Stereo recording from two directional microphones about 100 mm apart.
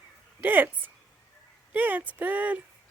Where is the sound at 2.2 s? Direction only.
15° right (ahead or behind).